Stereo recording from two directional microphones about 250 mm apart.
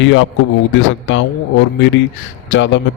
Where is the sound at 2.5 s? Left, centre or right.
Left.